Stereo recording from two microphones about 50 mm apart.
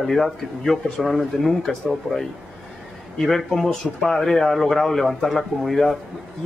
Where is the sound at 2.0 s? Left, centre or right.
Right.